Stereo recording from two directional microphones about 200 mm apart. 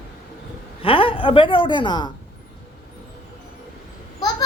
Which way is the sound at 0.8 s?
25° left (ahead or behind).